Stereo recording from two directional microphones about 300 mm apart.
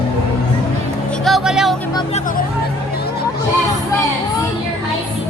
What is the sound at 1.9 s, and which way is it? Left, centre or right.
Speech, centre.